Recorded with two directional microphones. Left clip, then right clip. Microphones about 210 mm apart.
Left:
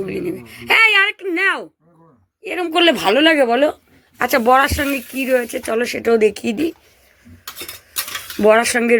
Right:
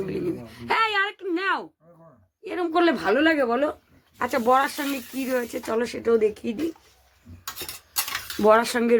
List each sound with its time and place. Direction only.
0.0 s a woman's voice: 5° left (ahead or behind); by 6.7 s 30° left (ahead or behind)
8.4 s speech: 10° left (ahead or behind)